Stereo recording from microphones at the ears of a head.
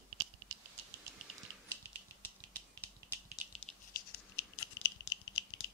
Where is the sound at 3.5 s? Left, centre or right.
Left.